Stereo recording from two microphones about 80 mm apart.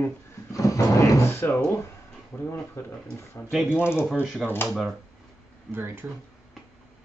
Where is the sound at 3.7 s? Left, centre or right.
Left.